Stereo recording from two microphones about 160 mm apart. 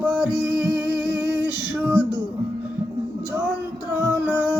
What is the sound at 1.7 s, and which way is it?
Speech, 10° right (ahead or behind).